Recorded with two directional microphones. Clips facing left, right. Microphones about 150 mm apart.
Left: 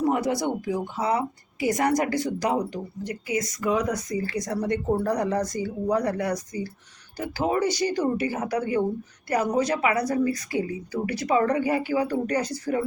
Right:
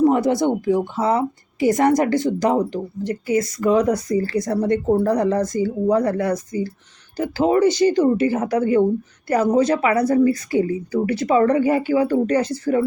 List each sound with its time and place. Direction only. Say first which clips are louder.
0.3 s speech: right 7 dB; 25° right (ahead or behind)
8.5 s speech: right 7 dB; 45° right (ahead or behind)
9.2 s speech: right 6 dB; 25° right (ahead or behind)